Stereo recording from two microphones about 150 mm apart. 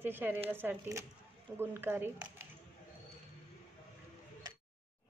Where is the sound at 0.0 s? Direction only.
10° right (ahead or behind).